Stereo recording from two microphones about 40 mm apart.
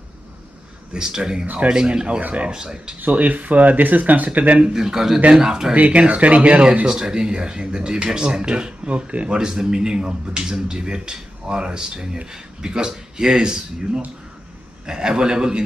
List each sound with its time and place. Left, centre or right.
0.9 s speech: centre
1.4 s speech: right
1.7 s a man's voice: centre
2.2 s speech: right
2.5 s speech: centre
3.0 s speech: right
4.7 s speech: centre
5.8 s speech: right
6.9 s a man's voice: centre; by 9.4 s right
9.4 s a man's voice: centre